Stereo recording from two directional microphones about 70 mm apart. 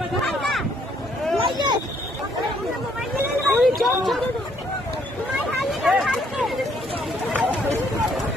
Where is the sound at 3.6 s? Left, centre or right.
Centre.